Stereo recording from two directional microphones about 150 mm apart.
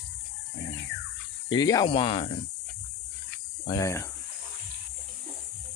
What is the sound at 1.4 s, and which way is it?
Speech, 25° left (ahead or behind).